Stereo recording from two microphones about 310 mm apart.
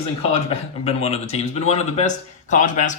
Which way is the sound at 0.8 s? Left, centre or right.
Centre.